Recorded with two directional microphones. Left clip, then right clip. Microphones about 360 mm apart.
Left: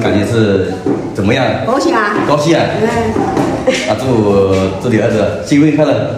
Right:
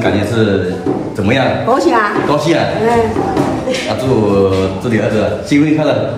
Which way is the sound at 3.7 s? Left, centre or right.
Left.